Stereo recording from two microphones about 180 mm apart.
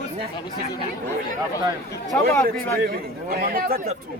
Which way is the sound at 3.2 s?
55° right (ahead or behind).